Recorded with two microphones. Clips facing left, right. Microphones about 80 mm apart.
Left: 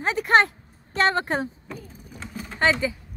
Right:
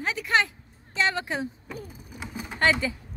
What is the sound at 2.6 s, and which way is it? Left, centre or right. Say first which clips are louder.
Speech: left 2 dB; centre.